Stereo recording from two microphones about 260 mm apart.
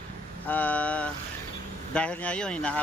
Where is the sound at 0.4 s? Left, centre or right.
Centre.